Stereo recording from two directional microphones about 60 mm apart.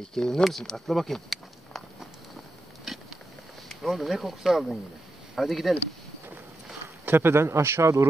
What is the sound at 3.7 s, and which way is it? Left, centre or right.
Speech, centre.